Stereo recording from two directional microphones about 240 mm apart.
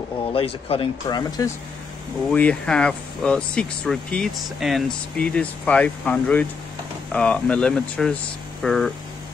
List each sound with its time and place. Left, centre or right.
0.3 s speech: left
2.3 s speech: centre